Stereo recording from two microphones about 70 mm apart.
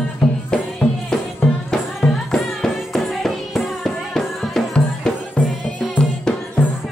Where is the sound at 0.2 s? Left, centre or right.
Centre.